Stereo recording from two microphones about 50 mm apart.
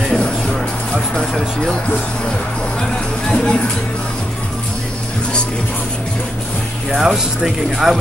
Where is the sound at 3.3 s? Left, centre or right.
Centre.